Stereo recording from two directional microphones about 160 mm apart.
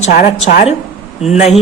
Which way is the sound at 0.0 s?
50° left (ahead or behind).